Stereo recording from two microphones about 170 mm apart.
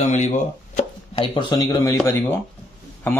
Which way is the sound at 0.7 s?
35° left (ahead or behind).